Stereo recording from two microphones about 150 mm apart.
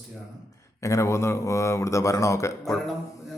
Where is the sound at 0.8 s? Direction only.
20° left (ahead or behind).